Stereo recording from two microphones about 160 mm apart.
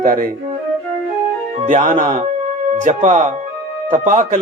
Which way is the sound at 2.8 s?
50° right (ahead or behind).